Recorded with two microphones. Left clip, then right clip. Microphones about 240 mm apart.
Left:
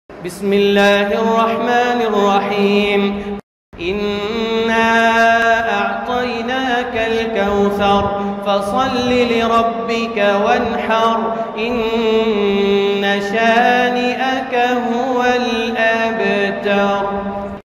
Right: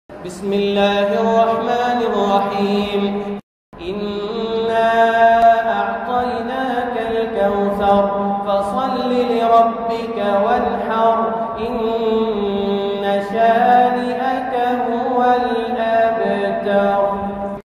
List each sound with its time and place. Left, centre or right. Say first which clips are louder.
0.5 s mantra: left 4 dB; left
4.6 s mantra: even; left
7.3 s mantra: left 1 dB; left
8.5 s chant: left 6 dB; left
11.8 s mantra: left 2 dB; left